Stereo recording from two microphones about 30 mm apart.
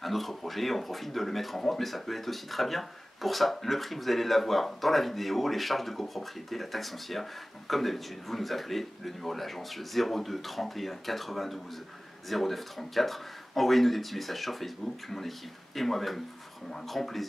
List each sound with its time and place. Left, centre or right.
0.0 s speech: centre